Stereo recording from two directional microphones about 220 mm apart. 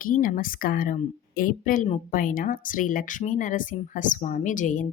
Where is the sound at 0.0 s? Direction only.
40° left (ahead or behind).